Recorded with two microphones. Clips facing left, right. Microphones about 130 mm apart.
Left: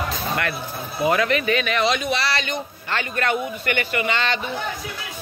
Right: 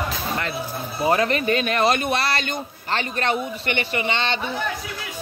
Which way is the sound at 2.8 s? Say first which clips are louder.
Even; 30° right (ahead or behind).